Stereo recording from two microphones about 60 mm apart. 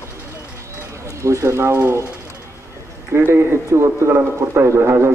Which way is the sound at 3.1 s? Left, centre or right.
Right.